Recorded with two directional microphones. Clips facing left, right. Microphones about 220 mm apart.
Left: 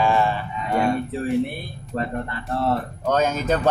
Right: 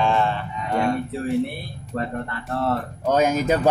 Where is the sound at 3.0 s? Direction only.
10° right (ahead or behind).